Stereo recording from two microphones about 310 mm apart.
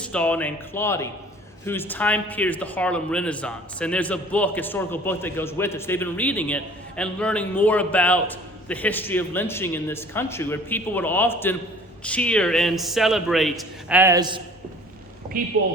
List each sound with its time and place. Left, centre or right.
0.0 s speech: centre
15.3 s speech: right